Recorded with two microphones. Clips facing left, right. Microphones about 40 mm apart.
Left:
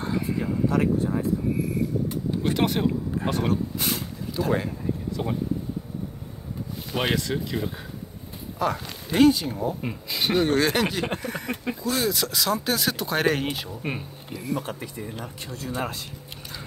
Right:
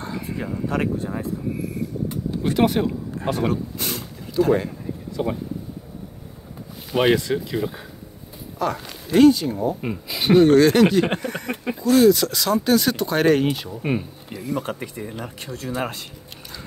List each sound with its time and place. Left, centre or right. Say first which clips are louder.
0.0 s a sound: left 3 dB; centre
0.4 s speech: even; right
1.6 s vehicle: left 1 dB; centre
3.7 s a sound: even; centre
4.4 s speech: right 8 dB; centre
5.1 s speech: right 7 dB; centre
6.9 s speech: right 7 dB; centre
9.8 s speech: right 2 dB; centre
10.4 s speech: right 9 dB; centre
14.7 s speech: right 4 dB; right
15.4 s speech: right 3 dB; right